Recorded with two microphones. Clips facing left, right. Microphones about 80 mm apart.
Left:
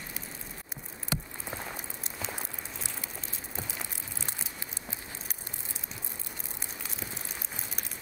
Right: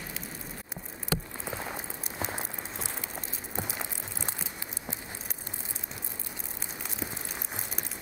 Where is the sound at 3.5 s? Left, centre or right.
Right.